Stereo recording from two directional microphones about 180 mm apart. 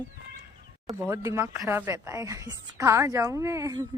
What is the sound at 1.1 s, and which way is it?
A woman's voice, 15° right (ahead or behind).